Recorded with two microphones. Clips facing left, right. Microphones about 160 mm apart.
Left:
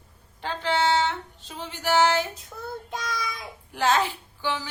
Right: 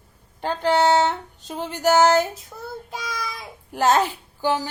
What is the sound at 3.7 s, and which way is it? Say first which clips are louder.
Speech: right 4 dB; 40° right (ahead or behind).